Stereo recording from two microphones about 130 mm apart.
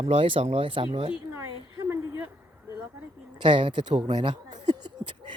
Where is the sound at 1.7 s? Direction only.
30° right (ahead or behind).